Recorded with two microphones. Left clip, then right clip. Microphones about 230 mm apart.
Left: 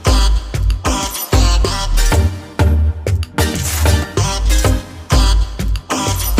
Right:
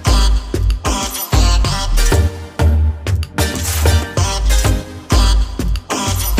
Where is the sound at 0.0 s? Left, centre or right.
Centre.